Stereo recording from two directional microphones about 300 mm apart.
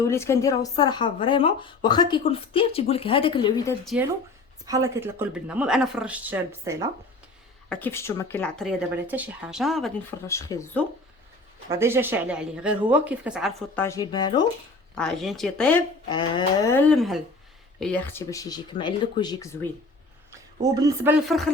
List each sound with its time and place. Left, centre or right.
0.0 s speech: centre
4.6 s speech: centre
7.7 s speech: centre
11.7 s speech: centre
13.8 s speech: centre
14.9 s speech: centre
16.0 s speech: centre
20.7 s speech: centre